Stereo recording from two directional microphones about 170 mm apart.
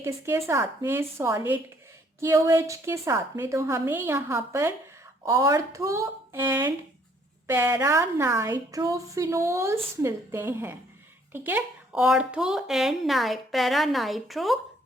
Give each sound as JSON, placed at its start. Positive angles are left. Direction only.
{"t": 0.0, "sound": "a woman's voice", "side_deg": -15}